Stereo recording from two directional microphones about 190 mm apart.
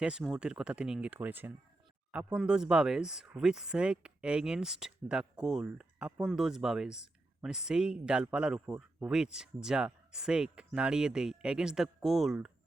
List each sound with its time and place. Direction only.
0.0 s speech: 5° right (ahead or behind)